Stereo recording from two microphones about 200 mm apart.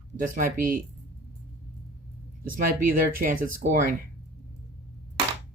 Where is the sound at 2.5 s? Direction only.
45° right (ahead or behind).